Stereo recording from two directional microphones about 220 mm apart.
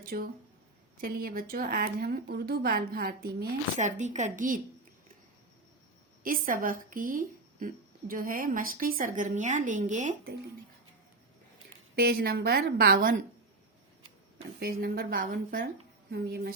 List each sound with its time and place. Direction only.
0.0 s a woman's voice: 40° right (ahead or behind)
6.2 s a woman's voice: 40° right (ahead or behind)
11.9 s a woman's voice: 45° right (ahead or behind)
14.6 s a woman's voice: 45° right (ahead or behind)